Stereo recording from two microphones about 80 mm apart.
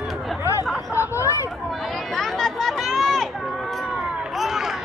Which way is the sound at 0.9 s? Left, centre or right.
Left.